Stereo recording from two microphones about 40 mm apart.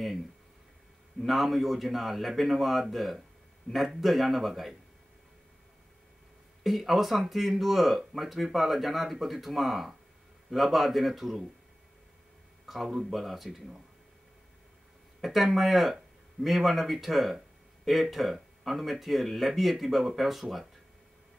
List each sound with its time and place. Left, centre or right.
1.2 s speech: centre
6.6 s speech: centre
12.6 s speech: centre
15.1 s speech: centre